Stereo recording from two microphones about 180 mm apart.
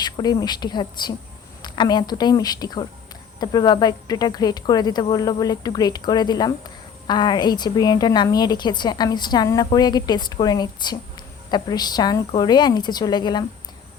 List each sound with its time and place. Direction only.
0.0 s speech: 20° left (ahead or behind)